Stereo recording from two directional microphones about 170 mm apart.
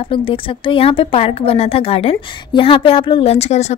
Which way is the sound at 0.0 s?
30° left (ahead or behind).